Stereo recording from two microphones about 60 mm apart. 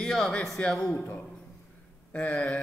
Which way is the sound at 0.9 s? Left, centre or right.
Left.